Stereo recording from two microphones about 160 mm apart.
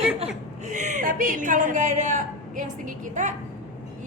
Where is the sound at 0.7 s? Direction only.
50° right (ahead or behind).